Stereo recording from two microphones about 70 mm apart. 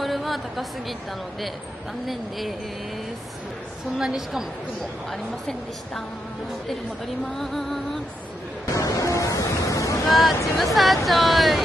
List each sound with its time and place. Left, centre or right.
0.0 s a woman's voice: centre
2.0 s a woman's voice: centre
4.0 s a woman's voice: centre
5.1 s a woman's voice: centre
7.3 s a woman's voice: centre
8.6 s waves: left
10.0 s speech: centre
10.3 s speech: left
10.6 s a woman's voice: centre